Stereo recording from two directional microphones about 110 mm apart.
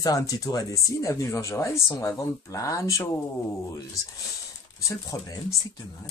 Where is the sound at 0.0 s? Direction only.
30° left (ahead or behind).